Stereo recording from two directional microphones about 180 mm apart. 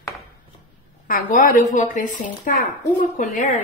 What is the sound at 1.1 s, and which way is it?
A woman's voice, 45° left (ahead or behind).